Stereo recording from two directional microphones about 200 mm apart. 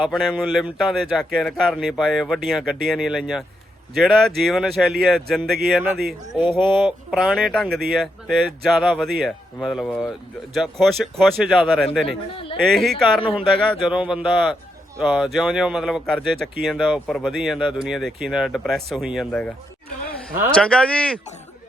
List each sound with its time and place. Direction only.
0.0 s speech: centre (ahead or behind)
12.0 s speech: 25° left (ahead or behind)
12.7 s speech: centre (ahead or behind)